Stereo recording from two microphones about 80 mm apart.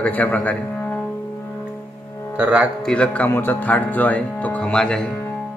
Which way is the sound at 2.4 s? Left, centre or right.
Centre.